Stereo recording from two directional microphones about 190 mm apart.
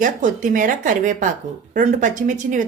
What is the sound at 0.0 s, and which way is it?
A woman's voice, 45° right (ahead or behind).